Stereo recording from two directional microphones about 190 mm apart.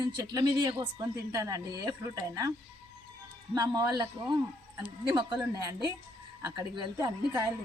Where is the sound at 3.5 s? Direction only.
20° right (ahead or behind).